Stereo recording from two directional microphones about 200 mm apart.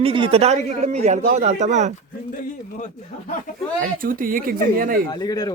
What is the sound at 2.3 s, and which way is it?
Speech, 40° left (ahead or behind).